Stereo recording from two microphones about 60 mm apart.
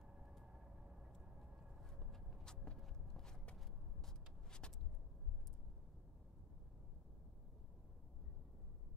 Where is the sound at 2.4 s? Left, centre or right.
Centre.